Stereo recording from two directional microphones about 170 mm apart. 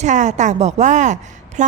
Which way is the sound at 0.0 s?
45° right (ahead or behind).